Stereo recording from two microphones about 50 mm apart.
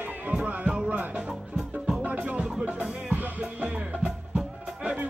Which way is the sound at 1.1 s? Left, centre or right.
Centre.